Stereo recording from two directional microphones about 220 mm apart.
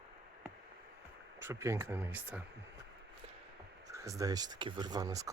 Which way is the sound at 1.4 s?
10° right (ahead or behind).